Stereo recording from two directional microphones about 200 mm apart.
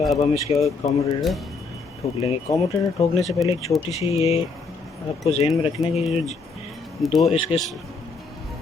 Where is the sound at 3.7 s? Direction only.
20° left (ahead or behind).